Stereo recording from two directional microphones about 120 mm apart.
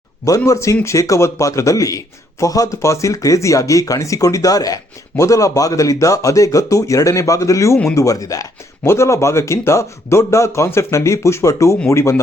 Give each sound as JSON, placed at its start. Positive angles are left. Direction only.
{"t": 0.3, "sound": "speech", "side_deg": 25}